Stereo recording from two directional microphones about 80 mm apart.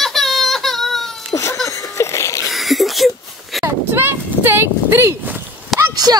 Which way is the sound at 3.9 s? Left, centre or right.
Right.